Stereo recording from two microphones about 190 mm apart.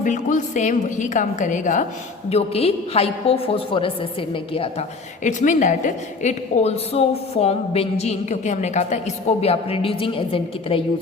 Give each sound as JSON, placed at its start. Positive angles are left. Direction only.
{"t": 0.0, "sound": "a woman's voice", "side_deg": 40}